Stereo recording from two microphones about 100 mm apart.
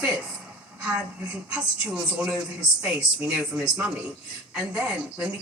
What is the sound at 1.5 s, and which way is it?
A man's voice, 10° right (ahead or behind).